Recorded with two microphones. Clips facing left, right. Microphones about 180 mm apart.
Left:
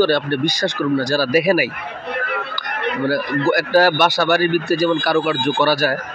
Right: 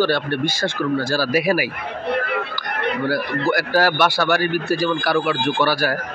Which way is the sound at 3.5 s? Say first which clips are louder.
Left 4 dB; 20° left (ahead or behind).